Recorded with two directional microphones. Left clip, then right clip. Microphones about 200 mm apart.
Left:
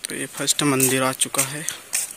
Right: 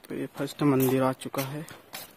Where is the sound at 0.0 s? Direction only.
Centre (ahead or behind).